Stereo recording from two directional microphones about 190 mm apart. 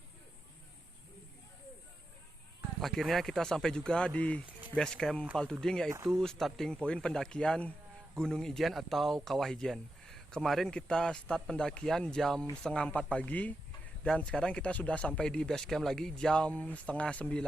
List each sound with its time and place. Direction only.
2.8 s speech: centre (ahead or behind)